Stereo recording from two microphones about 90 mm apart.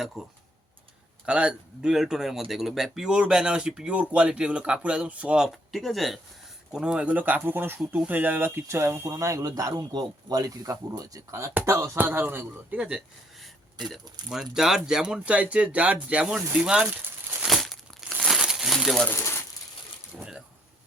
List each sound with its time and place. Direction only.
0.0 s speech: 5° right (ahead or behind)
5.5 s speech: centre (ahead or behind); by 11.2 s 45° right (ahead or behind)
11.3 s speech: 30° right (ahead or behind)
11.9 s a man's voice: 25° right (ahead or behind)
13.9 s speech: 5° right (ahead or behind)
17.4 s crumpling: centre (ahead or behind)
19.1 s a sound: 30° left (ahead or behind)